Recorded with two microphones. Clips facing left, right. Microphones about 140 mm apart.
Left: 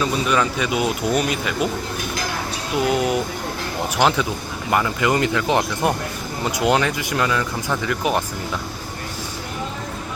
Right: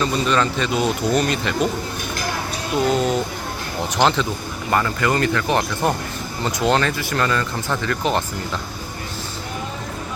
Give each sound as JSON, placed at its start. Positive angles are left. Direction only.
{"t": 0.0, "sound": "speech", "side_deg": 10}
{"t": 2.8, "sound": "speech", "side_deg": 10}